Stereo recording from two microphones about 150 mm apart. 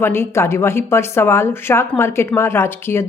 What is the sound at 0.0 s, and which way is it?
Speech, 15° left (ahead or behind).